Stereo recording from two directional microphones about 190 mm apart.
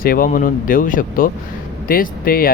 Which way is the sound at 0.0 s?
50° left (ahead or behind).